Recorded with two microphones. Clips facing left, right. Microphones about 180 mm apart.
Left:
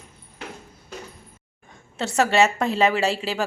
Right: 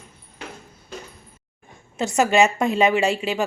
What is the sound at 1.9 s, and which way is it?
A woman's voice, 15° right (ahead or behind).